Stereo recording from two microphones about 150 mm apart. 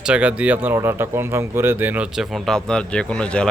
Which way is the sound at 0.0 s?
10° right (ahead or behind).